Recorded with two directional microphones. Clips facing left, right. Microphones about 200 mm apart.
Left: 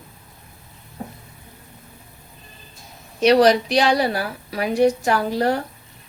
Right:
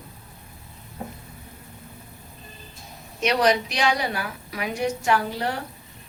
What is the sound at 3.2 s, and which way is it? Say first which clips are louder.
A woman's voice: left 7 dB; 35° left (ahead or behind).